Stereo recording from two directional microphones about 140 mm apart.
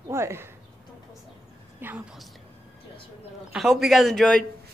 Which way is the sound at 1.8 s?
15° right (ahead or behind).